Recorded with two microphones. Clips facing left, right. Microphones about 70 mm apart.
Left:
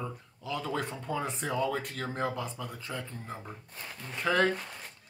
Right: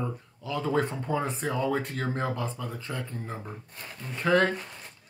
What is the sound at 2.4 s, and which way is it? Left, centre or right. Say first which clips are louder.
Speech: right 3 dB; centre.